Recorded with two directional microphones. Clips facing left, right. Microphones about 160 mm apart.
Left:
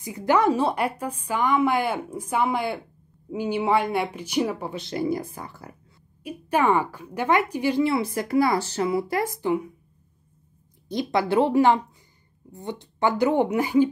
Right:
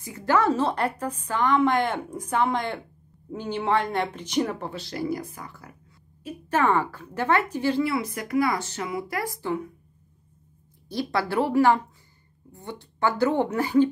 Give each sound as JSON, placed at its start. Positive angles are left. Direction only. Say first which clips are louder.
{"t": 0.0, "sound": "speech", "louder": "left 2 dB", "side_deg": 15}
{"t": 4.8, "sound": "speech", "louder": "left 4 dB", "side_deg": 25}
{"t": 6.2, "sound": "speech", "louder": "left 1 dB", "side_deg": 10}
{"t": 7.8, "sound": "speech", "louder": "left 3 dB", "side_deg": 25}
{"t": 10.9, "sound": "speech", "louder": "left 3 dB", "side_deg": 20}